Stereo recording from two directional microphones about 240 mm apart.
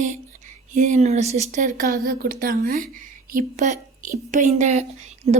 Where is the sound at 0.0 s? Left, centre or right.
Right.